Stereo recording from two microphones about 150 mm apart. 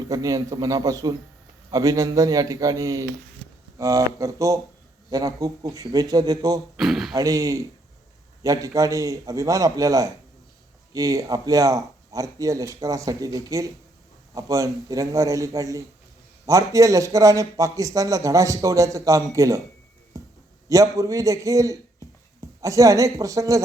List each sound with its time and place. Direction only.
0.1 s a man's voice: 25° right (ahead or behind)
6.7 s speech: centre (ahead or behind)
7.1 s a man's voice: 25° right (ahead or behind)
20.1 s a sound: 20° right (ahead or behind)
20.7 s a man's voice: 20° right (ahead or behind)